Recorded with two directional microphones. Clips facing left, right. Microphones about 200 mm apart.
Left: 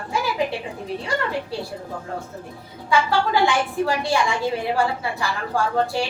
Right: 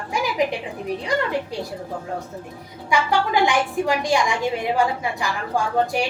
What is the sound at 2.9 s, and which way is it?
A woman's voice, 15° right (ahead or behind).